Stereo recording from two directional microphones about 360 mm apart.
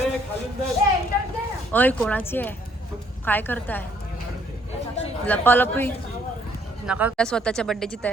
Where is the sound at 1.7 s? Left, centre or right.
Centre.